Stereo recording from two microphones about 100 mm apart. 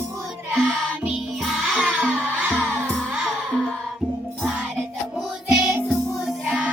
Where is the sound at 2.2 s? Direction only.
20° right (ahead or behind).